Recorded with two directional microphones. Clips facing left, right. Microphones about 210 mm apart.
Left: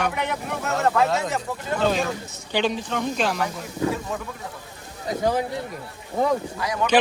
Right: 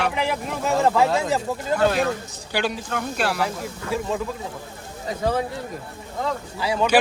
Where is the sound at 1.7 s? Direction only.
10° right (ahead or behind).